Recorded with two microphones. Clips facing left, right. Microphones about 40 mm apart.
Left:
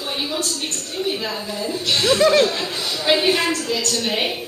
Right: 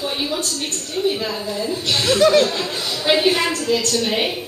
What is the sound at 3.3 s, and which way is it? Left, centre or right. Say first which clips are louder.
Speech: right 1 dB; right.